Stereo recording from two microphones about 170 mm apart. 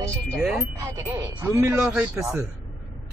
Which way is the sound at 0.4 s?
10° right (ahead or behind).